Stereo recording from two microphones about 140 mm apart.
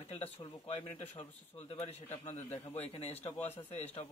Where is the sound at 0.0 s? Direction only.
45° left (ahead or behind).